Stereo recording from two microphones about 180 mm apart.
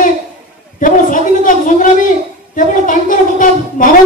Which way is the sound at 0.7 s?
45° left (ahead or behind).